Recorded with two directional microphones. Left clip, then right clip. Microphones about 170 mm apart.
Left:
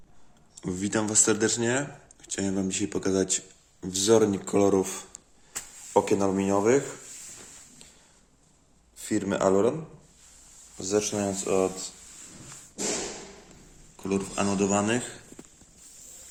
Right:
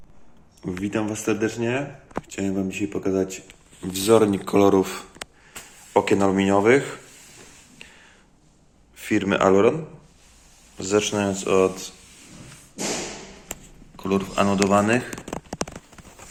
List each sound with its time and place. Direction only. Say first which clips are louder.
0.6 s speech: right 2 dB; 30° left (ahead or behind)
2.2 s speech: right 2 dB; 25° left (ahead or behind); by 7.0 s 10° left (ahead or behind)
9.0 s speech: right 6 dB; 15° left (ahead or behind)
10.8 s speech: right 5 dB; 5° left (ahead or behind)
13.9 s speech: right 6 dB; 10° left (ahead or behind)